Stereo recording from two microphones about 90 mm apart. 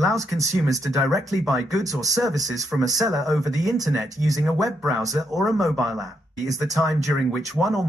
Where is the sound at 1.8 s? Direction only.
40° right (ahead or behind).